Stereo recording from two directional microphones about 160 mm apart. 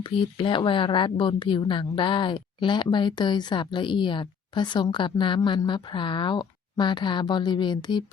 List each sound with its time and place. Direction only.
0.0 s a woman's voice: 30° left (ahead or behind)